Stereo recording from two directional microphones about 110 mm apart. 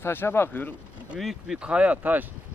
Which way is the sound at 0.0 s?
20° left (ahead or behind).